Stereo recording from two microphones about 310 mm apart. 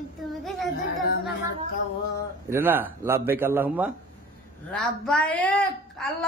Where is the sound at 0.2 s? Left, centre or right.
Centre.